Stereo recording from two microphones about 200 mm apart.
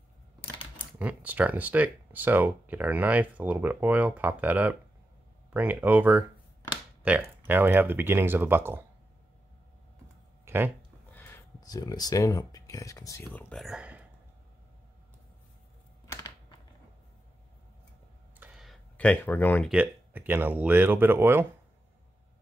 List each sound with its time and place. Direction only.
0.9 s speech: 10° right (ahead or behind)
10.4 s a sound: 10° right (ahead or behind)
11.1 s speech: 15° left (ahead or behind); by 14.0 s 5° right (ahead or behind)
16.1 s computer keyboard: 20° left (ahead or behind)
18.4 s a sound: centre (ahead or behind)
19.7 s speech: 10° right (ahead or behind)